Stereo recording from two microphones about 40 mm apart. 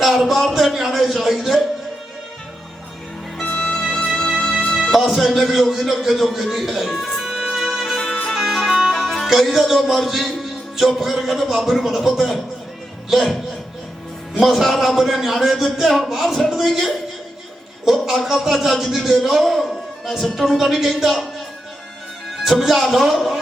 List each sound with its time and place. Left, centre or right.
0.0 s a sound: centre
0.4 s speech: centre
3.5 s music: left
4.9 s speech: centre
7.5 s music: centre
9.2 s speech: centre
14.3 s speech: centre
22.3 s speech: centre